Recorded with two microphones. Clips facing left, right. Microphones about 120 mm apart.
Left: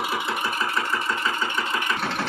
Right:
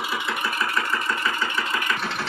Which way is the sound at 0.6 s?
20° left (ahead or behind).